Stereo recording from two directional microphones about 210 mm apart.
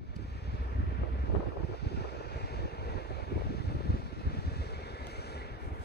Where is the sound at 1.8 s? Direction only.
50° left (ahead or behind).